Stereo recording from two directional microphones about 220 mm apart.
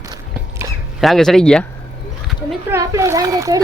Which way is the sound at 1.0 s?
Centre (ahead or behind).